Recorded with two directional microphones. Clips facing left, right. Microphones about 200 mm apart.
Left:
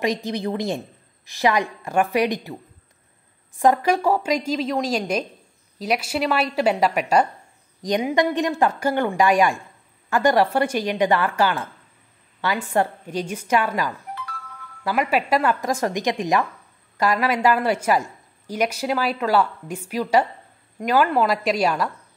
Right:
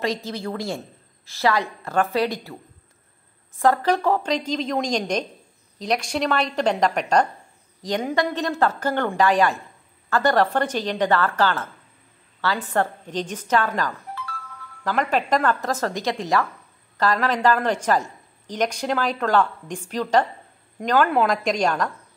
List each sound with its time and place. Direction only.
0.0 s a woman's voice: 15° left (ahead or behind)
3.5 s a woman's voice: 15° left (ahead or behind)